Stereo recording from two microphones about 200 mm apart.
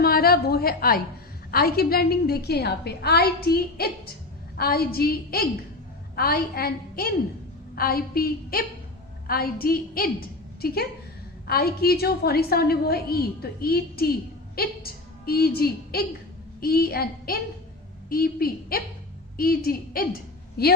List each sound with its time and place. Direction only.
0.0 s a woman's voice: 50° left (ahead or behind)